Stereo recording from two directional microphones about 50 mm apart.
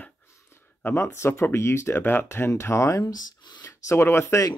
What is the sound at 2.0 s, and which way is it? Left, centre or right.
Speech, left.